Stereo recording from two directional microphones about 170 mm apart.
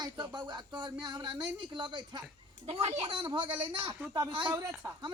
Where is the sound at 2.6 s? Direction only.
40° right (ahead or behind).